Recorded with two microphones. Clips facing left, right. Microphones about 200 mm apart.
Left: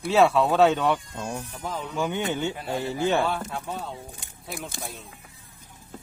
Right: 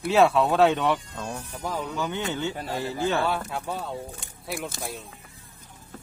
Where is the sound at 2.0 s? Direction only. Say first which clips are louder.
Left 6 dB; 20° left (ahead or behind).